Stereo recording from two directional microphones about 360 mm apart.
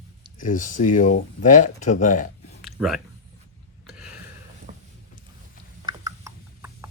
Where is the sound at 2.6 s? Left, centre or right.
Centre.